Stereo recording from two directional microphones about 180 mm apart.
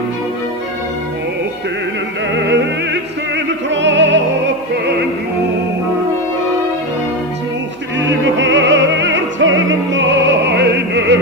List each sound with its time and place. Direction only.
2.5 s music: 75° right (ahead or behind)
8.0 s music: 90° right